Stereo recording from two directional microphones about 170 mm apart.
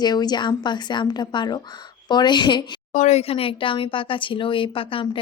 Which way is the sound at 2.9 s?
40° left (ahead or behind).